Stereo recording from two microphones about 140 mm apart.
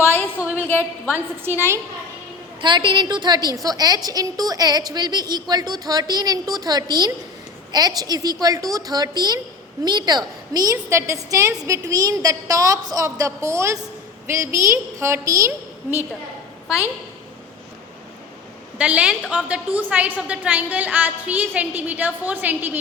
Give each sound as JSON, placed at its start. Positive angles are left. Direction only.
{"t": 0.8, "sound": "a woman's voice", "side_deg": -15}
{"t": 2.6, "sound": "a woman's voice", "side_deg": -35}
{"t": 18.8, "sound": "a woman's voice", "side_deg": -10}